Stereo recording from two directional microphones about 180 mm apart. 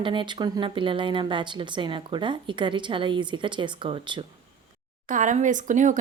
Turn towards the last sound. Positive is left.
turn(degrees=-45)  # may be behind; listen again after turning